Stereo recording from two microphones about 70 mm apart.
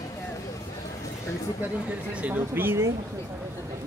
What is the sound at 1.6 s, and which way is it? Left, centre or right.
Speech, right.